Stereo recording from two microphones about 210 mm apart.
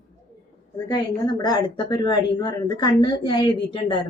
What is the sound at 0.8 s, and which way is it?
A woman's voice, 20° left (ahead or behind).